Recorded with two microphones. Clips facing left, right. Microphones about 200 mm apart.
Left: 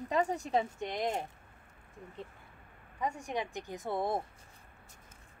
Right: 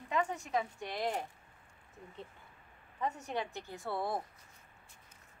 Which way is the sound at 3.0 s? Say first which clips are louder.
Left 1 dB; 10° left (ahead or behind).